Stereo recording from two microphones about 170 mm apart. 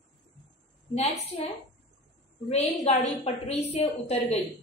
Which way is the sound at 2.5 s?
40° left (ahead or behind).